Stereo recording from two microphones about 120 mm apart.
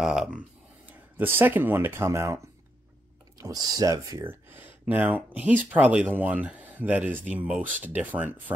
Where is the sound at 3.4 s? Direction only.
30° right (ahead or behind).